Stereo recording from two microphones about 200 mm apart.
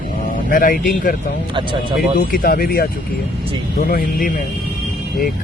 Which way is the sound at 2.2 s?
45° left (ahead or behind).